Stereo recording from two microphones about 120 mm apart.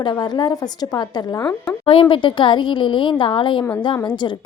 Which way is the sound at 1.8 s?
50° left (ahead or behind).